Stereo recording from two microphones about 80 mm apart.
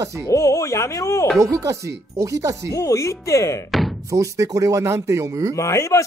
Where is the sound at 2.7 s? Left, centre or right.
Left.